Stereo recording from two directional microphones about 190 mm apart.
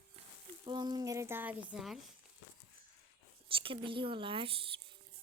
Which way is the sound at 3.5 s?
30° right (ahead or behind).